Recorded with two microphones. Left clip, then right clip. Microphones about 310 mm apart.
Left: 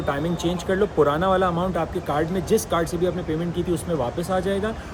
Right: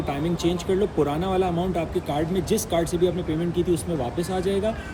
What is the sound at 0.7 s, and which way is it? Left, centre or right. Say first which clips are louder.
Speech: left 5 dB; left.